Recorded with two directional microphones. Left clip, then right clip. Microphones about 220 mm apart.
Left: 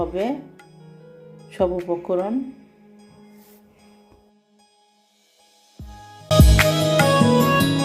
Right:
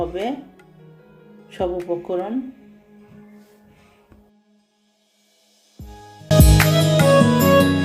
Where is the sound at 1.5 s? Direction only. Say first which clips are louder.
Left 2 dB; 20° left (ahead or behind).